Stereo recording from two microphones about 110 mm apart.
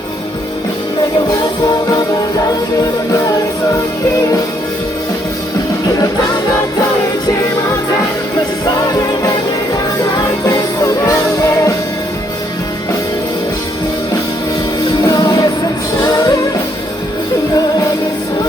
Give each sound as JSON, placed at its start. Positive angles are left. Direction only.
{"t": 1.6, "sound": "music", "side_deg": 35}
{"t": 8.4, "sound": "music", "side_deg": 35}
{"t": 15.0, "sound": "music", "side_deg": 35}